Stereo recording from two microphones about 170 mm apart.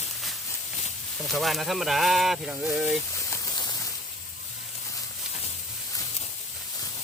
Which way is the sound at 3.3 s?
25° left (ahead or behind).